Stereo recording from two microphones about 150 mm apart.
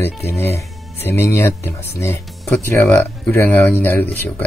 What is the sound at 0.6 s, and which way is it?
Speech, 15° left (ahead or behind).